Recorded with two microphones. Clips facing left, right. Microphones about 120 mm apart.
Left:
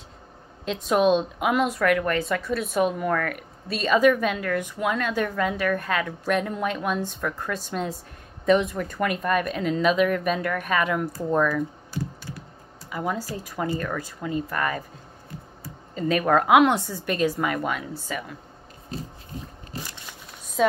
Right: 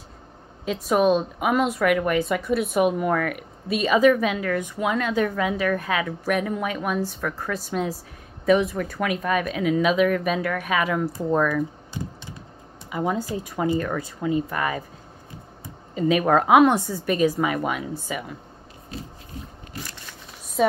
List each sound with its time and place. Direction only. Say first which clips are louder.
0.7 s speech: right 1 dB; 5° right (ahead or behind)
11.9 s computer keyboard: left 2 dB; 20° right (ahead or behind)
12.9 s speech: right 3 dB; 10° right (ahead or behind)